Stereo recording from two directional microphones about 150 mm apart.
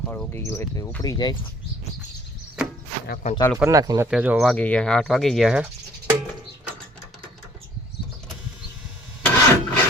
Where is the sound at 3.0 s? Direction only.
90° left.